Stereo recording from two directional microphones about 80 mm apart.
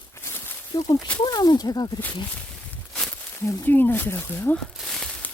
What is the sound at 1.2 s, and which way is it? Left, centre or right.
Speech, left.